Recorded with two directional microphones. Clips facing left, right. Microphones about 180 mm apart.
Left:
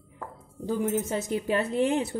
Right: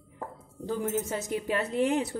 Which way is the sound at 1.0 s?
30° left (ahead or behind).